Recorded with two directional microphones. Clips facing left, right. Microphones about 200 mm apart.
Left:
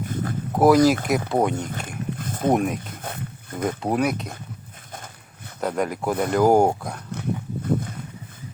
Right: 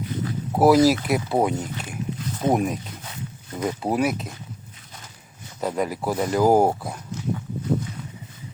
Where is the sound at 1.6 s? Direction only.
50° left (ahead or behind).